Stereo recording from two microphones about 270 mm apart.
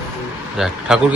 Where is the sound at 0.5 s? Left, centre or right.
Centre.